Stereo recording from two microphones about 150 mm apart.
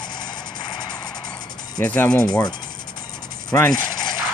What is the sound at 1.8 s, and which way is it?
Speech, 10° left (ahead or behind).